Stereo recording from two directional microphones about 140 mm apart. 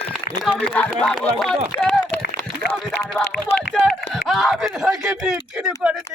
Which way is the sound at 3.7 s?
Centre (ahead or behind).